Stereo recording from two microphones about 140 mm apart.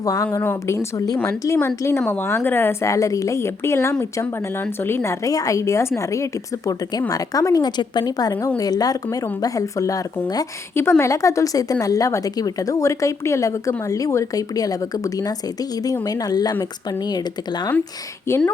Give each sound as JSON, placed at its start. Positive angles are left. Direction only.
{"t": 0.0, "sound": "a woman's voice", "side_deg": 25}
{"t": 9.0, "sound": "a woman's voice", "side_deg": 15}
{"t": 18.3, "sound": "a woman's voice", "side_deg": 15}